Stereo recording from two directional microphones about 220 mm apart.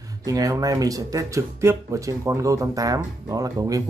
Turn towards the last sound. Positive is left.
turn(degrees=-15)  # may be behind; listen again after turning